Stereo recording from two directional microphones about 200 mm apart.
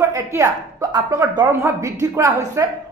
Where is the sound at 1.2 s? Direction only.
15° right (ahead or behind).